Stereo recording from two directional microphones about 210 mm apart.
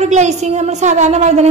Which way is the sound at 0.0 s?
30° right (ahead or behind).